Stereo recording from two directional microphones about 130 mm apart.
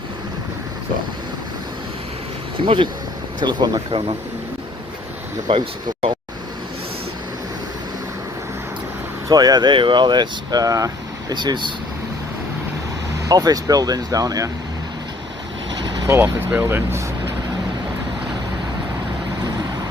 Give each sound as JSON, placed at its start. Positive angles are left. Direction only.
{"t": 2.6, "sound": "speech", "side_deg": -40}
{"t": 5.5, "sound": "speech", "side_deg": -40}
{"t": 9.3, "sound": "speech", "side_deg": -30}
{"t": 13.2, "sound": "speech", "side_deg": -25}
{"t": 15.7, "sound": "vehicle", "side_deg": -35}
{"t": 16.0, "sound": "speech", "side_deg": -20}